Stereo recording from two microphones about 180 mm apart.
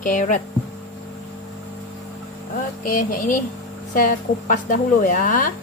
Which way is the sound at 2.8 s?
50° left (ahead or behind).